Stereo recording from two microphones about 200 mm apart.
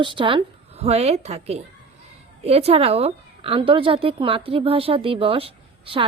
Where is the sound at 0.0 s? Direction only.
25° right (ahead or behind).